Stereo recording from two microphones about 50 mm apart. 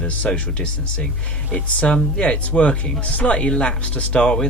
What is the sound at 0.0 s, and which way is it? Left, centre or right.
Speech, left.